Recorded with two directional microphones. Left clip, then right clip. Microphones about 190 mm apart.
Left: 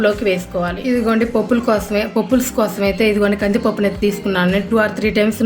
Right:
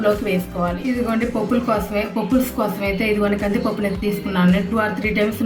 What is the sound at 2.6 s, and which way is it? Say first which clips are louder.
A woman's voice: left 5 dB; 55° left (ahead or behind).